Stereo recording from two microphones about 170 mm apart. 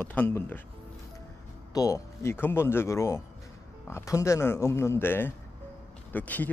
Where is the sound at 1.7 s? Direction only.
20° left (ahead or behind).